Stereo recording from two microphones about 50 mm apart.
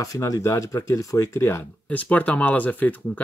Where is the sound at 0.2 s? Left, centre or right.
Left.